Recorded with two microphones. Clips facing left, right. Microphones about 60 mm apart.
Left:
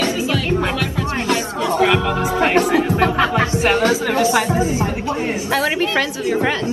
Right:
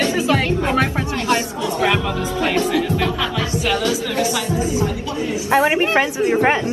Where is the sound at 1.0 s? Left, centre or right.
Left.